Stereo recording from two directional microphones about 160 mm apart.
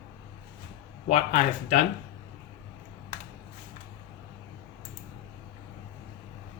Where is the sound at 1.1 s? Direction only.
45° left (ahead or behind).